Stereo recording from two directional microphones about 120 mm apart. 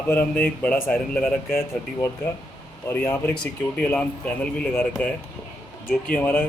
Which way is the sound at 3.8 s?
10° left (ahead or behind).